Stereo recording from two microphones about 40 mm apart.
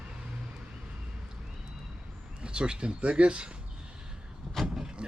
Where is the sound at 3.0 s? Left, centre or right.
Right.